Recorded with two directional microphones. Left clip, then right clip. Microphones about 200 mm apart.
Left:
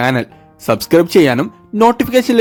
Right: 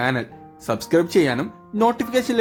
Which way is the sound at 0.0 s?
40° left (ahead or behind).